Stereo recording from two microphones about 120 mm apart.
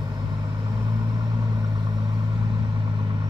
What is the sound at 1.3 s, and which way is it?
Vehicle, 30° right (ahead or behind).